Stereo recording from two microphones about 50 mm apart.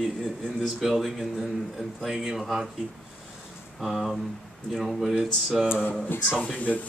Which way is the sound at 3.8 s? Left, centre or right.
Centre.